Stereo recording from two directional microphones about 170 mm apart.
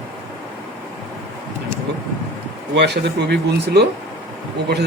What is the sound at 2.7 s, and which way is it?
Speech, 80° right.